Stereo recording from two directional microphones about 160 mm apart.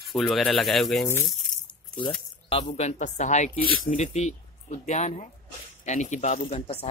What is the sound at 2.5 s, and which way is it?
Speech, 45° left (ahead or behind).